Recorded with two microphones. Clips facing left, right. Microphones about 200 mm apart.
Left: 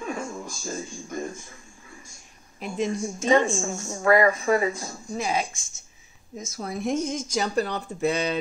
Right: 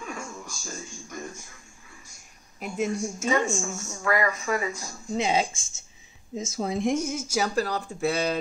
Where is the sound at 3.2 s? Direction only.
30° left (ahead or behind).